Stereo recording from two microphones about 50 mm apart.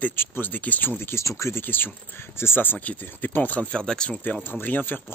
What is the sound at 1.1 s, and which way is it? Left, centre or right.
Speech, left.